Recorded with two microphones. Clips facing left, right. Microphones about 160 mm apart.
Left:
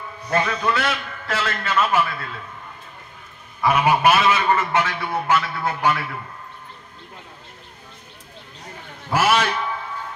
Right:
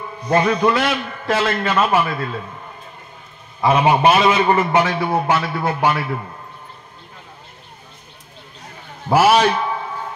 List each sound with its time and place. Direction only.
0.3 s a man's voice: 35° right (ahead or behind)
3.6 s a man's voice: 25° right (ahead or behind)
9.2 s a man's voice: 30° right (ahead or behind)